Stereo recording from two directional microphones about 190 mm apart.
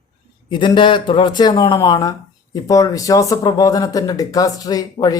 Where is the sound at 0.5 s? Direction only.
25° left (ahead or behind).